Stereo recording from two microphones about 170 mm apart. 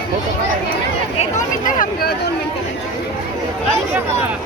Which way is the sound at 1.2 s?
50° left (ahead or behind).